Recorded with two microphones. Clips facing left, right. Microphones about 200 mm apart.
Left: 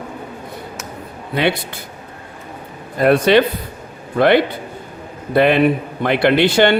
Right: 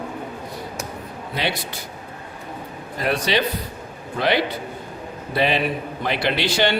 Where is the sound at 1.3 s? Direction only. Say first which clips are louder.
Left 8 dB; 55° left (ahead or behind).